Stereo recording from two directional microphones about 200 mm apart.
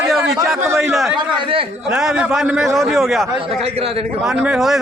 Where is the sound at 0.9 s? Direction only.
Centre (ahead or behind).